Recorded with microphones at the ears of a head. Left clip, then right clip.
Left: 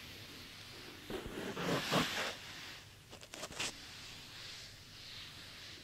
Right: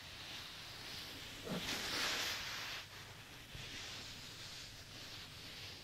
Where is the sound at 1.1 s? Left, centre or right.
Left.